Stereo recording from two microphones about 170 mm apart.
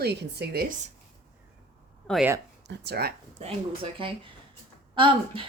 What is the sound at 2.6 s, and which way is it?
Speech, 80° right.